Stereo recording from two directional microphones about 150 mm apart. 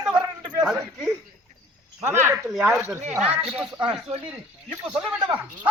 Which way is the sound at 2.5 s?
Centre (ahead or behind).